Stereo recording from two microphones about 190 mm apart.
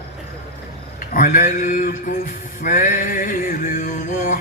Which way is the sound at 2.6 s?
40° left (ahead or behind).